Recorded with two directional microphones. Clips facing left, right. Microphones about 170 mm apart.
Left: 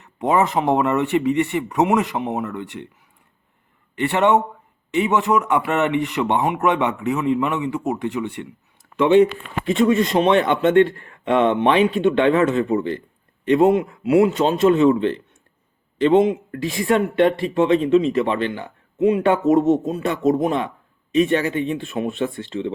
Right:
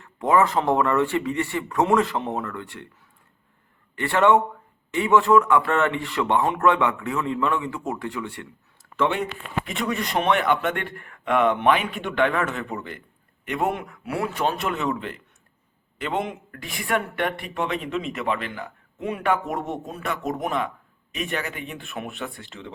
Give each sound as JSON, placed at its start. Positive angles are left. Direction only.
{"t": 0.0, "sound": "speech", "side_deg": 20}
{"t": 3.9, "sound": "speech", "side_deg": 20}